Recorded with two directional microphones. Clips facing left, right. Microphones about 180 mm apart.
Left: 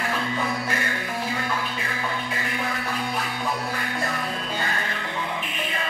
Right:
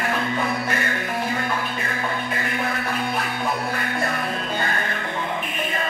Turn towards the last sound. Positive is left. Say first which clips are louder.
# right 3 dB
turn(degrees=-45)  # may be behind; listen again after turning